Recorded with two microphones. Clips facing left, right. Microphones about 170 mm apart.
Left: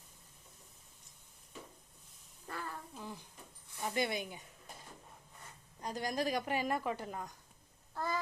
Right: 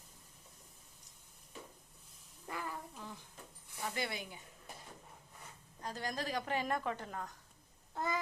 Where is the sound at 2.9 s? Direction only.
15° left (ahead or behind).